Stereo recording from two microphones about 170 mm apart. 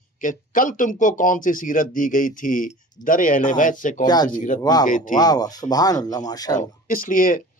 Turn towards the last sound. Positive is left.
turn(degrees=55)  # may be behind; listen again after turning